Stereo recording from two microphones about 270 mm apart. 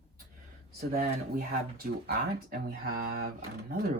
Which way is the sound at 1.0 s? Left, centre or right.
Right.